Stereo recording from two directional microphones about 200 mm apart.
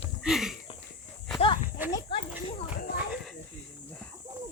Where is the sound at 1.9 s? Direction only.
25° left (ahead or behind).